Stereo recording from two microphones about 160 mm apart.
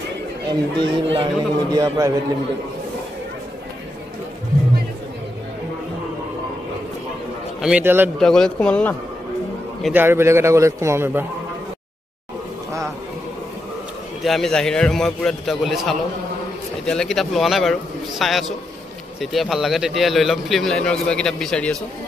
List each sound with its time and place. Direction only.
0.5 s a man's voice: 35° right (ahead or behind)
7.6 s a man's voice: 10° right (ahead or behind)
8.2 s speech: 5° left (ahead or behind)
9.9 s a man's voice: 15° right (ahead or behind)
14.2 s a man's voice: centre (ahead or behind)